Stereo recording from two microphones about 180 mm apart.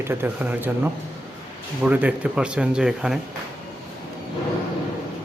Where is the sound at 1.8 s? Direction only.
10° right (ahead or behind).